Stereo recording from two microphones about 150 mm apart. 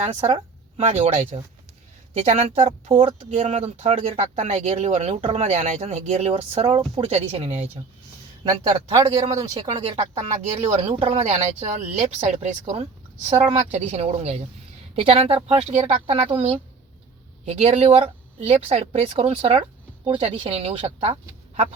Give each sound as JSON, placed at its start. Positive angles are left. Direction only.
{"t": 0.0, "sound": "speech", "side_deg": -45}
{"t": 9.0, "sound": "speech", "side_deg": -25}
{"t": 9.7, "sound": "speech", "side_deg": -40}